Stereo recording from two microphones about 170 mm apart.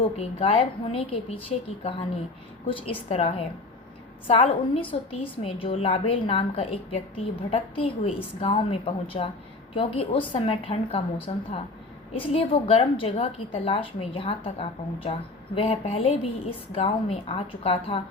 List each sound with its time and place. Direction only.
0.2 s a woman's voice: 35° left (ahead or behind)